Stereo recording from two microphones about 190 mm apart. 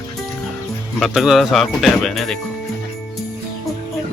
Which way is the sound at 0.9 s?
Centre (ahead or behind).